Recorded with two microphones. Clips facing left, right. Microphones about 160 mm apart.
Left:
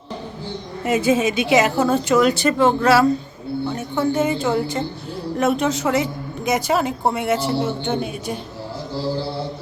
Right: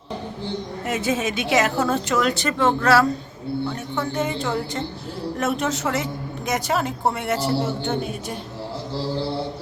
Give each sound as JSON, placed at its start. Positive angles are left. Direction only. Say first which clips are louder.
{"t": 0.9, "sound": "a woman's voice", "louder": "left 6 dB", "side_deg": 0}
{"t": 2.5, "sound": "speech", "louder": "left 4 dB", "side_deg": 15}
{"t": 3.7, "sound": "a woman's voice", "louder": "left 5 dB", "side_deg": 5}